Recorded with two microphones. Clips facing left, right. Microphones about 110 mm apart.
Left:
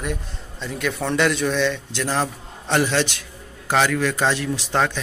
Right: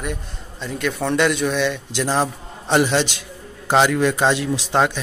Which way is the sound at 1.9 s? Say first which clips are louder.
Right 3 dB; 20° right (ahead or behind).